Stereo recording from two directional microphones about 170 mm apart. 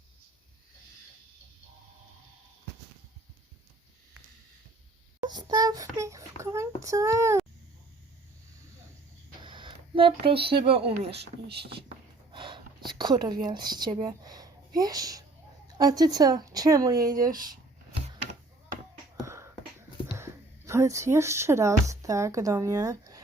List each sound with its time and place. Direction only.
5.2 s child singing: 25° right (ahead or behind)
9.4 s a sound: 30° right (ahead or behind)
10.6 s speech: 35° right (ahead or behind)
11.4 s speech: 75° right (ahead or behind)
12.3 s gasp: 25° right (ahead or behind)
12.9 s whispering: 25° right (ahead or behind)
13.4 s speech: 25° right (ahead or behind)
19.2 s a sound: 15° right (ahead or behind)
20.1 s speech: 15° right (ahead or behind)